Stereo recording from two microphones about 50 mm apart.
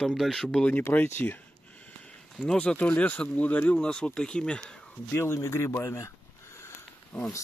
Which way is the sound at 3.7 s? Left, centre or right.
Centre.